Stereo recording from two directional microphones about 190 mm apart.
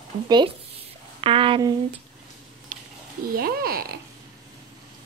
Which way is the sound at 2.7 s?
45° right (ahead or behind).